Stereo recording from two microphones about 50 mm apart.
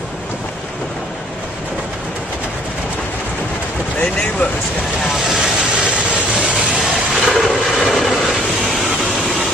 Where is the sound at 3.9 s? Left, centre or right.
Left.